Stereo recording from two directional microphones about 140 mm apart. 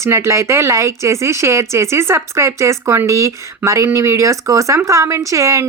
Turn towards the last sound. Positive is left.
turn(degrees=-20)  # may be behind; listen again after turning